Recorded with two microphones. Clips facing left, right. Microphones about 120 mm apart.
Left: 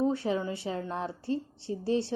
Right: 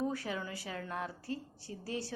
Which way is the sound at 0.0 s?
25° left (ahead or behind).